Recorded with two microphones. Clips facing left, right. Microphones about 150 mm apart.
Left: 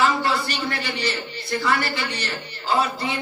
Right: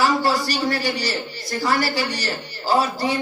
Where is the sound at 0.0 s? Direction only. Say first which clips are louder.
Right 2 dB; 40° right (ahead or behind).